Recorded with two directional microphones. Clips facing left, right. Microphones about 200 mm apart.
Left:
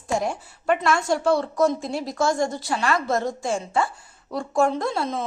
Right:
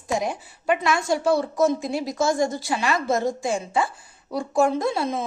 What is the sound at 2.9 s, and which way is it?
Speech, 20° right (ahead or behind).